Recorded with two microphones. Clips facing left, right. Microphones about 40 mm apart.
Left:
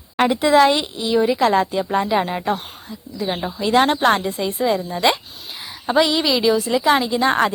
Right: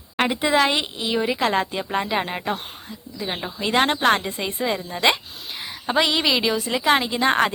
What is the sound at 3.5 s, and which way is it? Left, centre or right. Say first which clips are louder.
Speech: left 4 dB; right.